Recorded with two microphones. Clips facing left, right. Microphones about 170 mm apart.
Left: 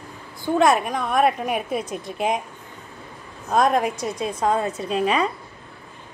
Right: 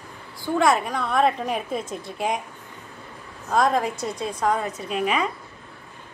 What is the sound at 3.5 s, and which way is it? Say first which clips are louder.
A woman's voice: left 2 dB; 20° left (ahead or behind).